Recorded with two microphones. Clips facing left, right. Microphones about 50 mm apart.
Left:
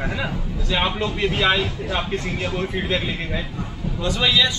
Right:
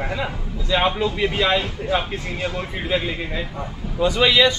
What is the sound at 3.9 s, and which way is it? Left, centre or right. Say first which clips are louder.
Speech: right 4 dB; centre.